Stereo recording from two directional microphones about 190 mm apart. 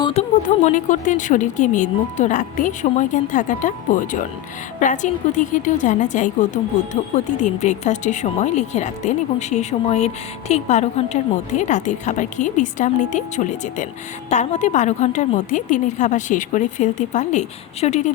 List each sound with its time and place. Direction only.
0.0 s a woman's voice: 35° left (ahead or behind)